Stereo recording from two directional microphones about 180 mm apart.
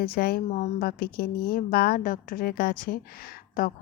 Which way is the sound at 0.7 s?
60° left (ahead or behind).